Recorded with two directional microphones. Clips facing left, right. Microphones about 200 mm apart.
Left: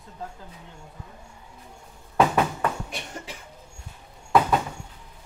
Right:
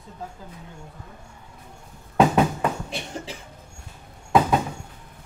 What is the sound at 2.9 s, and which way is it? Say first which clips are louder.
Cough: right 4 dB; 30° right (ahead or behind).